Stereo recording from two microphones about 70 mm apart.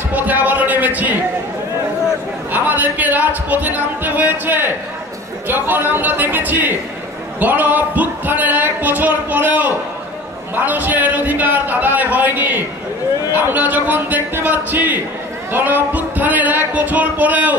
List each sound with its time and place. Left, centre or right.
0.1 s a man's voice: right
2.5 s speech: right